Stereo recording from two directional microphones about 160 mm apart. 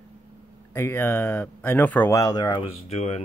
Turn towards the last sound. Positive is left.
turn(degrees=40)  # may be behind; listen again after turning